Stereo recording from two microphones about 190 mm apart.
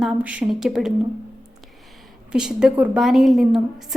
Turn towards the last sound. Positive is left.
turn(degrees=0)  # may be behind; listen again after turning